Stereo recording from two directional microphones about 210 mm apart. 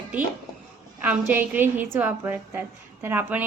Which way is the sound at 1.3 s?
10° right (ahead or behind).